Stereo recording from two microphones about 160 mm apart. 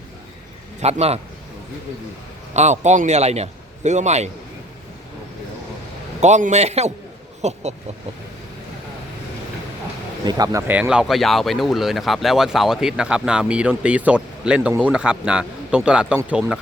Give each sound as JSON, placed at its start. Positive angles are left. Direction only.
{"t": 0.8, "sound": "a man's voice", "side_deg": -40}
{"t": 2.5, "sound": "a man's voice", "side_deg": -45}
{"t": 6.1, "sound": "a man's voice", "side_deg": -45}
{"t": 10.2, "sound": "speech", "side_deg": -25}
{"t": 10.7, "sound": "speech", "side_deg": -5}